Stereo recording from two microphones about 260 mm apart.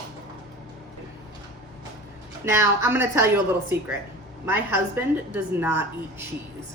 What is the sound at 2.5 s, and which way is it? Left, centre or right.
A woman's voice, centre.